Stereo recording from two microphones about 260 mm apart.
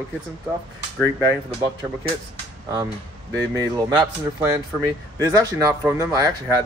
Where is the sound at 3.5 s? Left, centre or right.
Centre.